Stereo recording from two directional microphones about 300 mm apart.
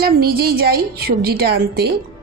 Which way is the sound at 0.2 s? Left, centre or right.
Right.